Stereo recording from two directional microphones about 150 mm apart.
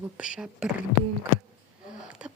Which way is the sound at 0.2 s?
5° right (ahead or behind).